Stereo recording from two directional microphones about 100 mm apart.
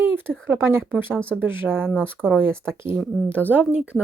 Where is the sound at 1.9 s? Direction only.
10° left (ahead or behind).